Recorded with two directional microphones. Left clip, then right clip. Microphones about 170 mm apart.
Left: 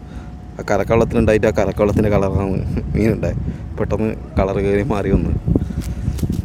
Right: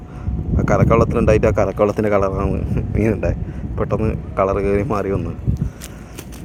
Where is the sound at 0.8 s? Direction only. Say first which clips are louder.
Left 1 dB; 30° left (ahead or behind).